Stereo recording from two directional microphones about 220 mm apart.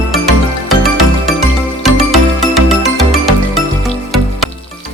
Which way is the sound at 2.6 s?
Centre (ahead or behind).